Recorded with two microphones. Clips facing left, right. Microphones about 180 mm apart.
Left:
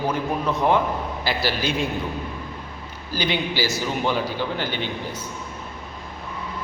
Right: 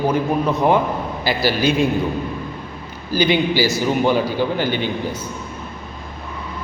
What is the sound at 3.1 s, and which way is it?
A man's voice, 5° right (ahead or behind).